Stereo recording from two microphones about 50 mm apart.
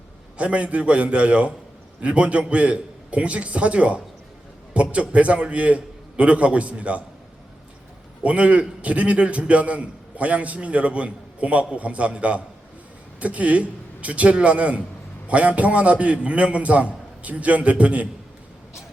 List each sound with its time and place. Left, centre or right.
0.3 s a man's voice: right
8.2 s a man's voice: right